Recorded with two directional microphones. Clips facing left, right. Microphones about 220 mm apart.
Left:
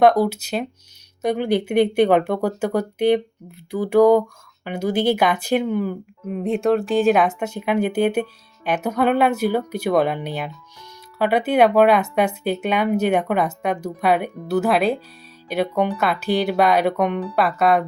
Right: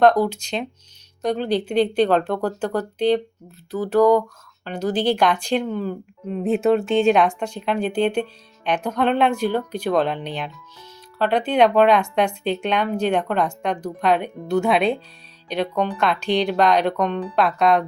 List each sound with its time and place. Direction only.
0.0 s speech: 10° left (ahead or behind)
6.4 s speech: 5° right (ahead or behind)